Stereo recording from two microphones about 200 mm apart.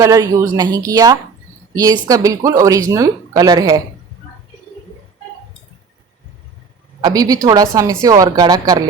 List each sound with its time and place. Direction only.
0.0 s speech: 15° right (ahead or behind)
7.0 s speech: 20° right (ahead or behind)